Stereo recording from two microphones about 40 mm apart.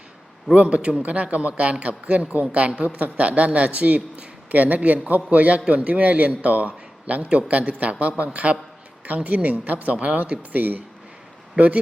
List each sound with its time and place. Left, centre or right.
0.5 s speech: right
10.5 s speech: right